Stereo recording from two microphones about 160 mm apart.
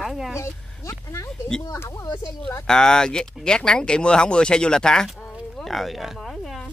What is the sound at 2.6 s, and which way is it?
Speech, 5° left (ahead or behind).